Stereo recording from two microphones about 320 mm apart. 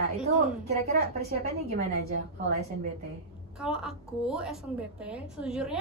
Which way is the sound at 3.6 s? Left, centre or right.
Centre.